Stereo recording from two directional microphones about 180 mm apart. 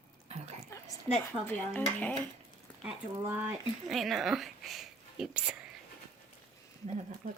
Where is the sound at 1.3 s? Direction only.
10° left (ahead or behind).